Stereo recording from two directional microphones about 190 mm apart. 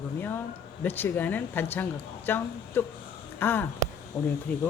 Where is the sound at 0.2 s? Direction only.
10° left (ahead or behind).